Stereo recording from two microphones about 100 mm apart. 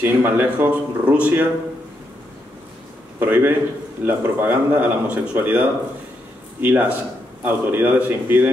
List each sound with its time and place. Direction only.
0.0 s speech: 20° right (ahead or behind)
3.2 s a man's voice: 20° right (ahead or behind)